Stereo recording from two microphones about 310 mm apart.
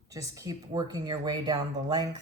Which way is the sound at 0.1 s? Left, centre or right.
Centre.